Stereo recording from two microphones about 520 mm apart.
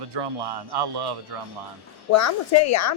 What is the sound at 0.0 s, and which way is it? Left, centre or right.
Speech, right.